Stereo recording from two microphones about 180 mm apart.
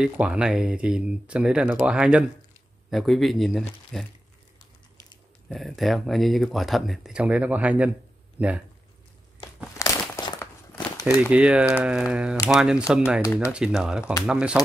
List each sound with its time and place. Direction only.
0.0 s speech: 5° right (ahead or behind)
5.5 s speech: centre (ahead or behind)
9.8 s a sound: 15° left (ahead or behind)
11.2 s speech: 5° right (ahead or behind)
13.2 s speech: 15° left (ahead or behind)
13.5 s speech: 5° right (ahead or behind)